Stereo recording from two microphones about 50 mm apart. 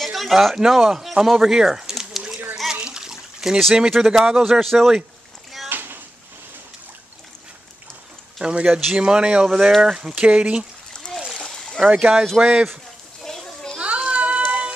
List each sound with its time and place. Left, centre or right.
0.0 s speech: centre
2.7 s water: centre
3.9 s a man's voice: centre
5.7 s a sound: right
8.4 s a man's voice: centre
9.5 s speech: centre
10.1 s speech: right
11.3 s splash: centre
11.9 s speech: centre
13.3 s children playing: centre
13.7 s a sound: right